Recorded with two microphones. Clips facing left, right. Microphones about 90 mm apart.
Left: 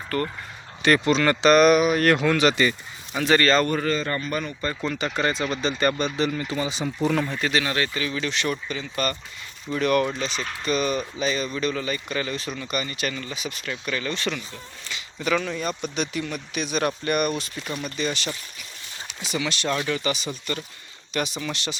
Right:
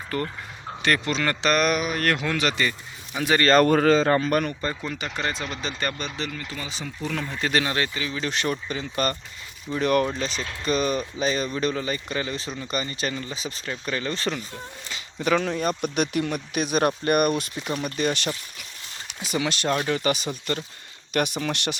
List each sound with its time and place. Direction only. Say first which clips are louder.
0.1 s speech: left 2 dB; 15° right (ahead or behind)
0.8 s speech: left 5 dB; 5° left (ahead or behind)
3.2 s speech: left 2 dB; 10° right (ahead or behind)
3.5 s speech: right 5 dB; 70° right (ahead or behind)
4.7 s speech: left 4 dB; 5° right (ahead or behind)
6.3 s speech: left 7 dB; 20° left (ahead or behind)
7.6 s speech: left 1 dB; 25° right (ahead or behind)
8.4 s speech: even; 35° right (ahead or behind)
19.3 s speech: right 2 dB; 45° right (ahead or behind)